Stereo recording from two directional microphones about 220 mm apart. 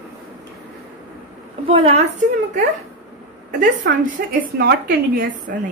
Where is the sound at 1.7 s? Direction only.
25° right (ahead or behind).